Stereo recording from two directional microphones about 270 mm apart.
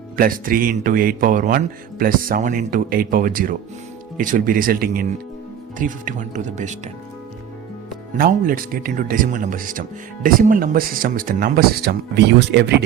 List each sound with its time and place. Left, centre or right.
0.2 s speech: right
8.1 s speech: right